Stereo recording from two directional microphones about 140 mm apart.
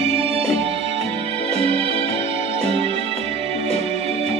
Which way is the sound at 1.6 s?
45° right (ahead or behind).